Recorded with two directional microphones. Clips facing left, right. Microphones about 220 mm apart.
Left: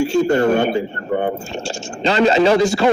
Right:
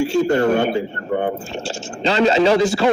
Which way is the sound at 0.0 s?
45° left (ahead or behind).